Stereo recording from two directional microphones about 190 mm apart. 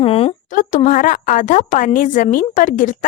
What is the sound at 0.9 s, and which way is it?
A woman's voice, 45° left (ahead or behind).